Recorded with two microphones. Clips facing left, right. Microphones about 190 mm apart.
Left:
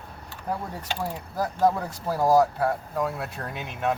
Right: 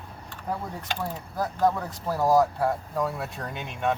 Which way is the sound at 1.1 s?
5° left (ahead or behind).